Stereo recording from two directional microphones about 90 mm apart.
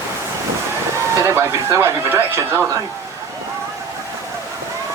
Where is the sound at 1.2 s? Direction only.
35° right (ahead or behind).